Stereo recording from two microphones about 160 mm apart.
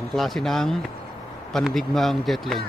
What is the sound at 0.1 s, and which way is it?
A man's voice, centre (ahead or behind).